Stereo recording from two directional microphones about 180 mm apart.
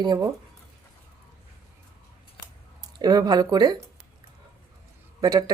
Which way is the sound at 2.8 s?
20° right (ahead or behind).